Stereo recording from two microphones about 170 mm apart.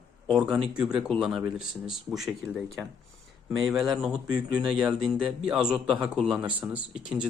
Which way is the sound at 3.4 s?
5° right (ahead or behind).